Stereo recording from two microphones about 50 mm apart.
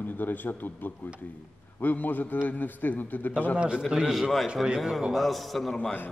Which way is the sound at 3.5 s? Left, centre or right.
Centre.